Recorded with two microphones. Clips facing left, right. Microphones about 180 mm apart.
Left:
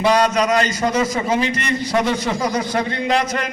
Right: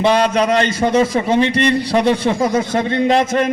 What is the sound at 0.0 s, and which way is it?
A man's voice, 30° right (ahead or behind).